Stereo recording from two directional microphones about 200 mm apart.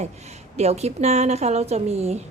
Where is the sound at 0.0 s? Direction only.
35° right (ahead or behind).